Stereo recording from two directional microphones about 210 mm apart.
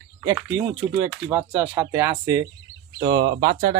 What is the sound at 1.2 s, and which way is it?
Speech, 10° right (ahead or behind).